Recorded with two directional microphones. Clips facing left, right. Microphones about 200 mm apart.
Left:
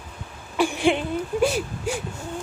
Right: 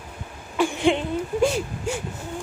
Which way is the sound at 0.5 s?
20° right (ahead or behind).